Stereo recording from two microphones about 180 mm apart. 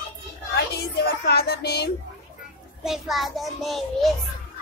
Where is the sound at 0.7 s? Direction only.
65° left (ahead or behind).